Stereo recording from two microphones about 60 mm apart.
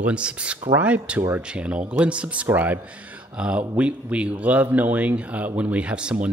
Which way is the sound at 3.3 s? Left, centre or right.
Centre.